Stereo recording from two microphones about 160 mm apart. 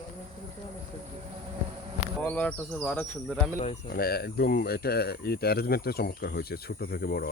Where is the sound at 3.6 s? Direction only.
50° left (ahead or behind).